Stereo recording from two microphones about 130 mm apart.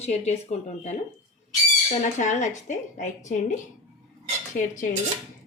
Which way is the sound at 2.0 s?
70° left (ahead or behind).